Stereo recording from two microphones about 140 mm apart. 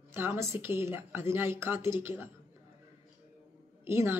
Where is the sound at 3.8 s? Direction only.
15° right (ahead or behind).